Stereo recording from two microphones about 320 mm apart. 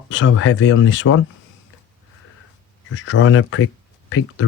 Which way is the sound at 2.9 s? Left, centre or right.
Left.